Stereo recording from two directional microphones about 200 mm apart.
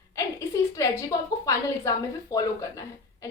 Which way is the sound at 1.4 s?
15° left (ahead or behind).